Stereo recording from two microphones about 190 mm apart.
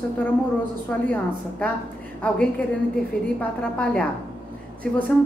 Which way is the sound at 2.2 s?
5° left (ahead or behind).